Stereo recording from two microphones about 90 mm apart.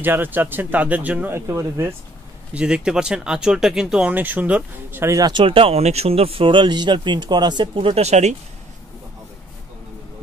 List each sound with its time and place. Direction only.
0.0 s speech: 20° right (ahead or behind)
1.3 s speech: 30° right (ahead or behind)
2.5 s speech: 10° right (ahead or behind)
4.1 s speech: 20° right (ahead or behind)
5.0 s speech: 40° right (ahead or behind)
5.3 s speech: 75° right (ahead or behind)